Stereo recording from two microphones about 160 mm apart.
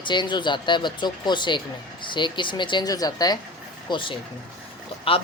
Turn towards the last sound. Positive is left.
turn(degrees=35)  # may be behind; listen again after turning